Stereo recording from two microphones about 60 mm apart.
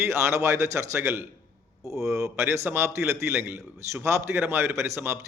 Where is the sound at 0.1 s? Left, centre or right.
Right.